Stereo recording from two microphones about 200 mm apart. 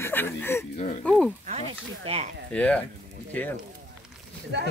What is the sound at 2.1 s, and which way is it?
Speech, 30° right (ahead or behind).